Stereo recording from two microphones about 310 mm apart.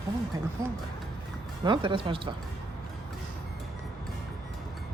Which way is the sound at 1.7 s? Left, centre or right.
Centre.